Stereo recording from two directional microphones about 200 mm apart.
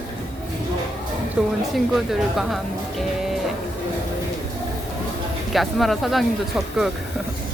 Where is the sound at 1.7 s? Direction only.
Centre (ahead or behind).